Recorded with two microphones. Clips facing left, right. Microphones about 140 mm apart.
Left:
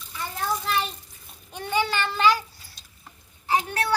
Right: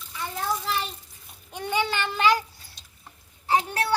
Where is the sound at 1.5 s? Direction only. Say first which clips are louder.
Left 1 dB; 15° right (ahead or behind).